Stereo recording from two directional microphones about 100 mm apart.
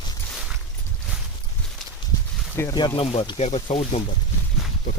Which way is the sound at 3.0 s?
75° left (ahead or behind).